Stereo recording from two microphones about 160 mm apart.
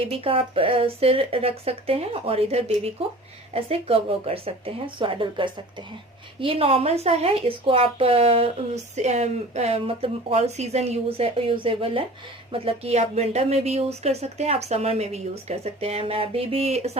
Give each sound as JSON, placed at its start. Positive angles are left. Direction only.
{"t": 0.0, "sound": "speech", "side_deg": -35}